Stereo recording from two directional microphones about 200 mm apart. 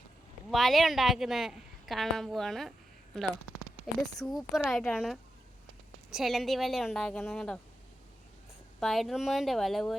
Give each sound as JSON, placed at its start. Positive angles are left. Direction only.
{"t": 0.5, "sound": "a woman's voice", "side_deg": 0}
{"t": 4.0, "sound": "speech", "side_deg": 20}
{"t": 4.3, "sound": "a woman's voice", "side_deg": 0}
{"t": 8.8, "sound": "a woman's voice", "side_deg": 0}